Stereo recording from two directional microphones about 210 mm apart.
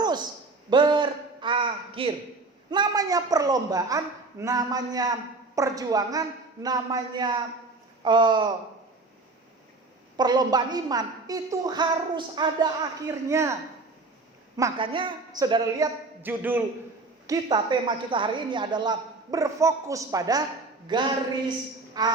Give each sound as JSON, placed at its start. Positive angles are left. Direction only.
{"t": 0.0, "sound": "a sound", "side_deg": -20}
{"t": 2.6, "sound": "a woman's voice", "side_deg": -20}
{"t": 10.2, "sound": "a woman's voice", "side_deg": -20}
{"t": 16.2, "sound": "a woman's voice", "side_deg": -10}